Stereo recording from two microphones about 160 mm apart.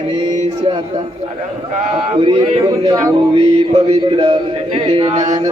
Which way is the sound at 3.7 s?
40° right (ahead or behind).